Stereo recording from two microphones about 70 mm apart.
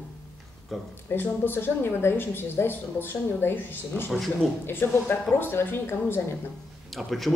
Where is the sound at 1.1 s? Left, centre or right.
Left.